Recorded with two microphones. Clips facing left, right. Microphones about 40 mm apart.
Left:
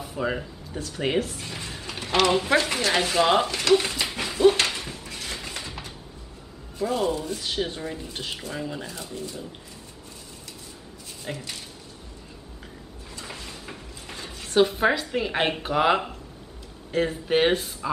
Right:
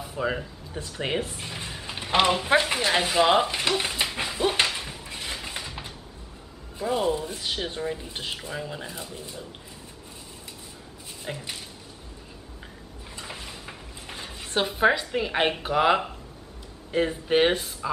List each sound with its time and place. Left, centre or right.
0.0 s speech: centre
1.2 s speech: centre
1.7 s creak: centre
2.5 s speech: centre
3.7 s dog: centre
4.6 s a sound: centre
6.8 s speech: centre
11.3 s speech: centre
13.2 s a sound: centre
14.3 s speech: centre